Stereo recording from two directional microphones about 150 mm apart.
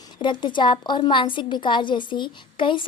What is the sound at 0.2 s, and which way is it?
A woman's voice, 30° left (ahead or behind).